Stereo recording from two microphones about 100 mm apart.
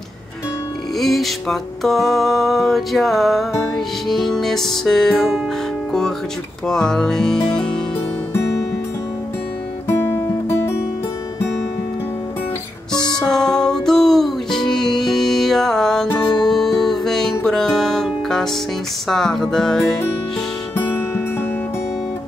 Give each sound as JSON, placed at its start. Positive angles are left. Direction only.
{"t": 0.9, "sound": "music", "side_deg": 0}
{"t": 6.7, "sound": "music", "side_deg": 5}
{"t": 9.8, "sound": "music", "side_deg": 25}
{"t": 12.9, "sound": "music", "side_deg": 45}
{"t": 13.3, "sound": "music", "side_deg": 5}